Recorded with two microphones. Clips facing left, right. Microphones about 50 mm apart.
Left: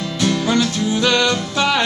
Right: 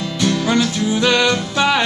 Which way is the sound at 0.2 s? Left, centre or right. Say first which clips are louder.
Right 1 dB; centre.